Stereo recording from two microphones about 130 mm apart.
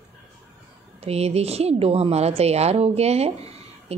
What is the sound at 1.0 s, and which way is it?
A woman's voice, 55° right (ahead or behind).